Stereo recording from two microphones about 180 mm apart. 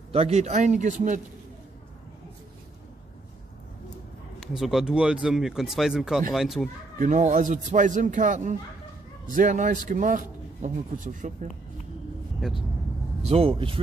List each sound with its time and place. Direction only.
0.1 s speech: 35° right (ahead or behind)
4.4 s speech: centre (ahead or behind)
7.0 s speech: 45° right (ahead or behind)
12.4 s speech: centre (ahead or behind)
13.2 s speech: 35° right (ahead or behind)